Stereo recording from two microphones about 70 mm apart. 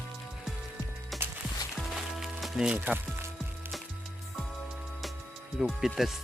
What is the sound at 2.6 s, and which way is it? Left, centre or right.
Speech, centre.